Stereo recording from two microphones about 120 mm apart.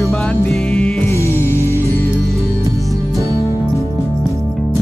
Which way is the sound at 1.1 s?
20° left (ahead or behind).